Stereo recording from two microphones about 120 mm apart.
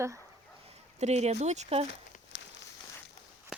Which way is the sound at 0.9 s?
65° right (ahead or behind).